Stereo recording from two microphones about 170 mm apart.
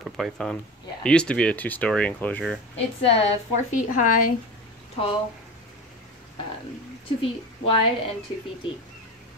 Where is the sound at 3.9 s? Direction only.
50° left (ahead or behind).